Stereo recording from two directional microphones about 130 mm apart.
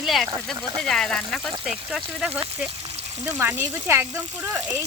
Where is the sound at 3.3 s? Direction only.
20° right (ahead or behind).